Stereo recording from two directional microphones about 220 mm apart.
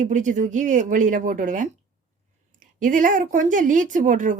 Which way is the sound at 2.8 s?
35° right (ahead or behind).